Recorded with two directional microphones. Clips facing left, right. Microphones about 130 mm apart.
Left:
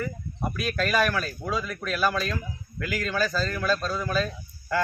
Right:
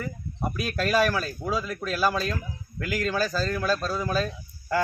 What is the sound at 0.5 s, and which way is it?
A man's voice, 35° right (ahead or behind).